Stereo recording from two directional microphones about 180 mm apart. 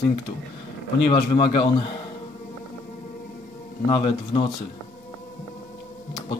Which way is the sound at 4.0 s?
25° left (ahead or behind).